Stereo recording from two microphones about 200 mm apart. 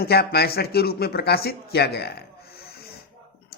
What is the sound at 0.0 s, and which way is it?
A man's voice, 50° left (ahead or behind).